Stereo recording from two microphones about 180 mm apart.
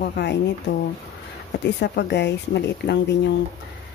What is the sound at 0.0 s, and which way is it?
Speech, 65° left (ahead or behind).